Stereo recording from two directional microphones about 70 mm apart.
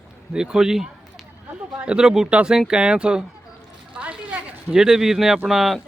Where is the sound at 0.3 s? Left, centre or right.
Centre.